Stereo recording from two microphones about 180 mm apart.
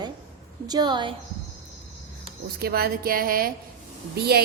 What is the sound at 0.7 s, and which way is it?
Speech, 25° right (ahead or behind).